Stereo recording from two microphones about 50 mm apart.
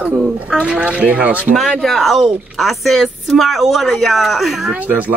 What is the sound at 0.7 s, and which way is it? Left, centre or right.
Speech, right.